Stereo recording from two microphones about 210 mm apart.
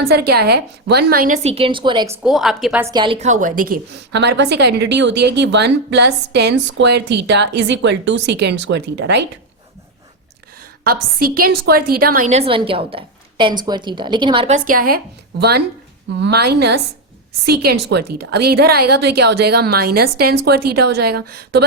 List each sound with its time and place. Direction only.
0.1 s a woman's voice: 50° right (ahead or behind)
1.4 s a woman's voice: 30° right (ahead or behind)
2.2 s a woman's voice: centre (ahead or behind)
2.8 s a woman's voice: 20° right (ahead or behind); by 9.2 s 55° right (ahead or behind)
10.6 s a woman's voice: 45° right (ahead or behind)
12.3 s a woman's voice: 25° right (ahead or behind)
14.7 s a woman's voice: 45° right (ahead or behind)